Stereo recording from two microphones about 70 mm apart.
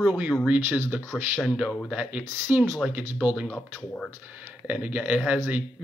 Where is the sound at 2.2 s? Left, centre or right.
Right.